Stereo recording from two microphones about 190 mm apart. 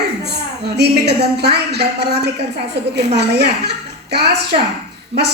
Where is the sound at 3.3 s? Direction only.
60° right (ahead or behind).